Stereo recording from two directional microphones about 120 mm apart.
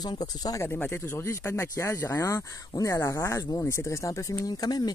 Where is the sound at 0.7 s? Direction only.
20° left (ahead or behind).